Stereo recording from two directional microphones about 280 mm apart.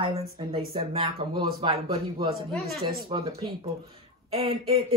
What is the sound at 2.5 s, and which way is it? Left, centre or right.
Speech, centre.